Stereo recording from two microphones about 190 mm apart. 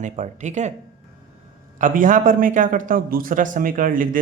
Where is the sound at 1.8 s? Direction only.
45° right (ahead or behind).